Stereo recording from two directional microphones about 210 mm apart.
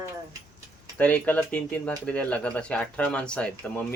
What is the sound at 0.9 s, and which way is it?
Speech, 5° left (ahead or behind).